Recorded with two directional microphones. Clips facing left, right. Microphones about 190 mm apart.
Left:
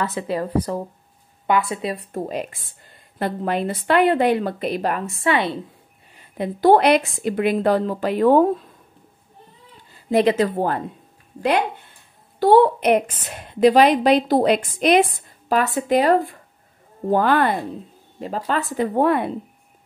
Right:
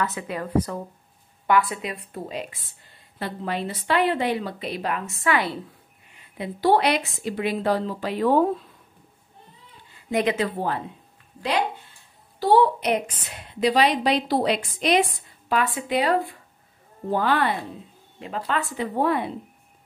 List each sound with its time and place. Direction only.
0.0 s a woman's voice: 30° left (ahead or behind)
2.1 s a woman's voice: 45° left (ahead or behind)
5.2 s a woman's voice: 25° left (ahead or behind)
6.1 s a woman's voice: 45° left (ahead or behind)
9.9 s a woman's voice: 35° left (ahead or behind)
18.2 s a woman's voice: 40° left (ahead or behind)
18.9 s speech: 55° left (ahead or behind)